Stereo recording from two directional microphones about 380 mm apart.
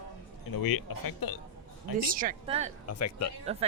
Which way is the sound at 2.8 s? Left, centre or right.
Left.